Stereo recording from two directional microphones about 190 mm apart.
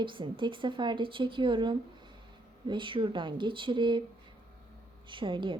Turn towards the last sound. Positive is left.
turn(degrees=-25)  # may be behind; listen again after turning